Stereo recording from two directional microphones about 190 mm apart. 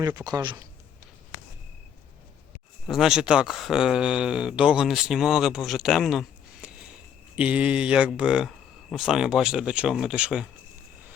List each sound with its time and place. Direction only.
0.0 s speech: 20° right (ahead or behind)
2.8 s speech: centre (ahead or behind)